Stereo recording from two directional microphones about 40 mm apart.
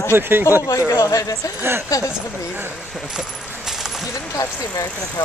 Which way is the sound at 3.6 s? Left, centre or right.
Centre.